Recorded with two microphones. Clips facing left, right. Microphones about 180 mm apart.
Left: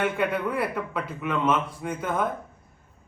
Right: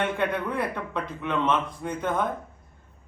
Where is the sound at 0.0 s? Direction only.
5° left (ahead or behind).